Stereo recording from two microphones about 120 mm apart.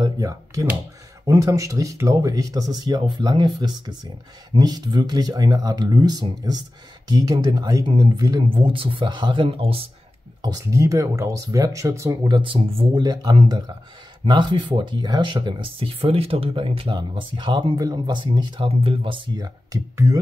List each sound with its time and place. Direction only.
0.0 s speech: 30° right (ahead or behind)
8.5 s speech: 45° right (ahead or behind)
10.4 s speech: 30° right (ahead or behind)
18.6 s speech: 50° right (ahead or behind); by 20.2 s 30° right (ahead or behind)